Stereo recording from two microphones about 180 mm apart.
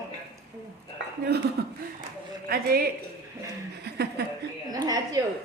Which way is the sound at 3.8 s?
65° right (ahead or behind).